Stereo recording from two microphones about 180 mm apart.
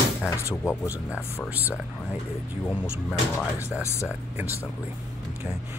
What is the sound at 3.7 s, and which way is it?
Speech, 15° left (ahead or behind).